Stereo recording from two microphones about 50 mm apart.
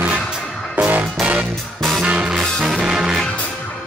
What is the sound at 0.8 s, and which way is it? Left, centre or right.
Music, right.